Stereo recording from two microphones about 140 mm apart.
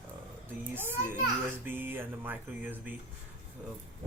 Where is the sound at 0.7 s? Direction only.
15° right (ahead or behind).